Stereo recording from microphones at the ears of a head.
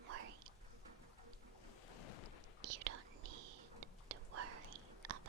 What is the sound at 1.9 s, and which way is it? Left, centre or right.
Boat, left.